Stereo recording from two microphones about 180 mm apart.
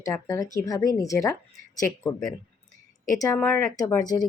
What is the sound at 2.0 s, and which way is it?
Speech, centre (ahead or behind).